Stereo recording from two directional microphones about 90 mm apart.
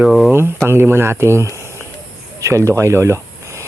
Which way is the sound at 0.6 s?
25° right (ahead or behind).